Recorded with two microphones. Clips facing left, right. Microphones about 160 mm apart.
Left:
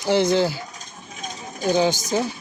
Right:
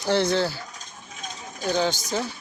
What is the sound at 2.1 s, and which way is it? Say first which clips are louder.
Speech: left 5 dB; 15° left (ahead or behind).